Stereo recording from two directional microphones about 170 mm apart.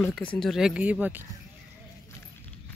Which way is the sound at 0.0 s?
5° left (ahead or behind).